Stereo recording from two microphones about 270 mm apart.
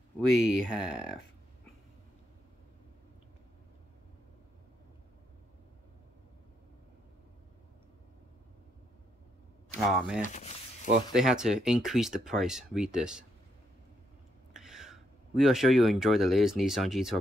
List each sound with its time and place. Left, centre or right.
0.3 s speech: centre
9.8 s speech: centre
10.2 s a sound: left
11.1 s speech: centre
14.5 s speech: centre